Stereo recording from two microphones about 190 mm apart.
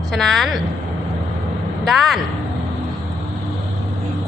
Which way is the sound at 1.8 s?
Centre (ahead or behind).